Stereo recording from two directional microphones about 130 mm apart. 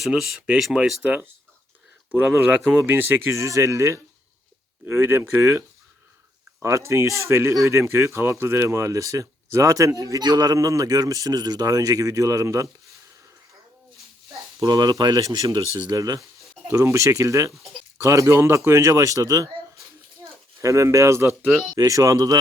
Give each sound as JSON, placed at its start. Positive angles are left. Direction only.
{"t": 0.0, "sound": "speech", "side_deg": 0}
{"t": 2.4, "sound": "speech", "side_deg": -15}
{"t": 14.6, "sound": "speech", "side_deg": -35}
{"t": 20.6, "sound": "speech", "side_deg": -25}
{"t": 21.4, "sound": "speech", "side_deg": -5}
{"t": 21.8, "sound": "speech", "side_deg": -25}